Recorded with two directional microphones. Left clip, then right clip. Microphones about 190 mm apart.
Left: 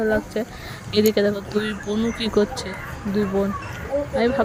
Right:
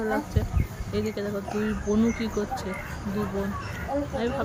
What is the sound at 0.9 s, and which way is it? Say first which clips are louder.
Speech: left 11 dB; 45° left (ahead or behind).